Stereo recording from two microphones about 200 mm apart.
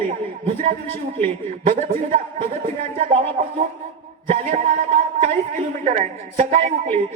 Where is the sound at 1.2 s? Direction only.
35° right (ahead or behind).